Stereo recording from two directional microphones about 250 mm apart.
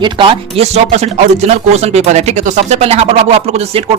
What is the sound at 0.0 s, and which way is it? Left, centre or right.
Speech, centre.